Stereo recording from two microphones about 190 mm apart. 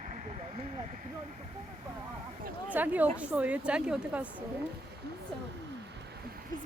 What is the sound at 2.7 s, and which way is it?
A woman's voice, 10° right (ahead or behind).